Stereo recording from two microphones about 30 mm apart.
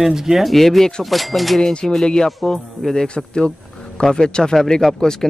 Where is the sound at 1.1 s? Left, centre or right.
Centre.